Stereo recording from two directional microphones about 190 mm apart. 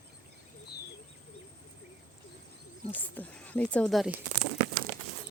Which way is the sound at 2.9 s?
10° left (ahead or behind).